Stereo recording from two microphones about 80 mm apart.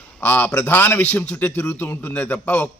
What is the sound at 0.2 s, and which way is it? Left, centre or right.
A man's voice, left.